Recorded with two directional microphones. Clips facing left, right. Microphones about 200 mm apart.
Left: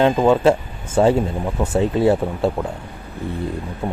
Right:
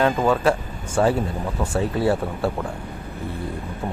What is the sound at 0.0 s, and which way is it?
Speech, 25° left (ahead or behind).